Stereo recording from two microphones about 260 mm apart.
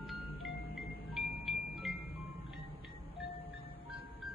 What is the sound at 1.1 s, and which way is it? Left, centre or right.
Music, centre.